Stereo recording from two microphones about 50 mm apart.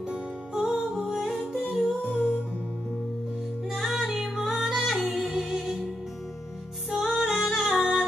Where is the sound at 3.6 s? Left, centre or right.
Centre.